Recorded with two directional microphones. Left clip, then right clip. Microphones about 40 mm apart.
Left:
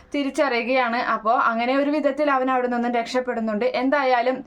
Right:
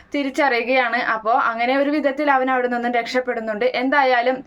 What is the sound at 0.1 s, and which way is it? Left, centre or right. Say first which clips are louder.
Speech: right 3 dB; left.